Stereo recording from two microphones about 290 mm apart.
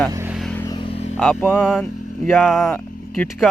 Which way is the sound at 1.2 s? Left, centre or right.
Centre.